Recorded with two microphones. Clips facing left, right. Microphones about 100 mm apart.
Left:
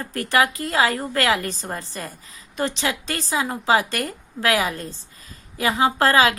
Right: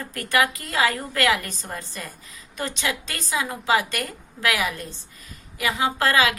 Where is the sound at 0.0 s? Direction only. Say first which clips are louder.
Left 2 dB; 30° left (ahead or behind).